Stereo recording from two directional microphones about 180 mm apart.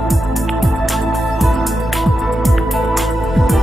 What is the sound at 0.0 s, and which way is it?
Music, centre (ahead or behind).